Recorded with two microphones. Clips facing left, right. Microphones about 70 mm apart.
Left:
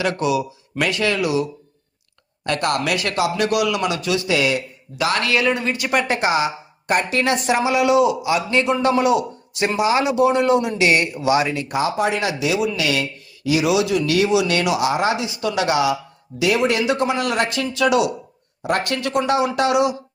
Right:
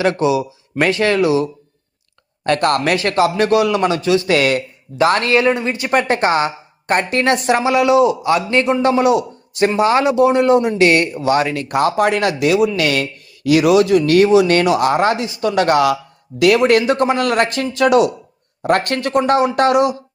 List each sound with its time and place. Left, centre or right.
0.0 s speech: right
2.4 s speech: right
4.3 s speech: right
4.9 s speech: right
10.8 s speech: right